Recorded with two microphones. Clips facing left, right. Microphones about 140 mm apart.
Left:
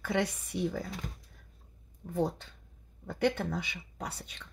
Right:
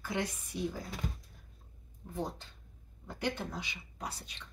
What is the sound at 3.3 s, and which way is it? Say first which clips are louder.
Speech: left 6 dB; 55° left (ahead or behind).